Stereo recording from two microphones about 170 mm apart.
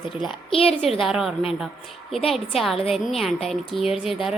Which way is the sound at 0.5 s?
35° left (ahead or behind).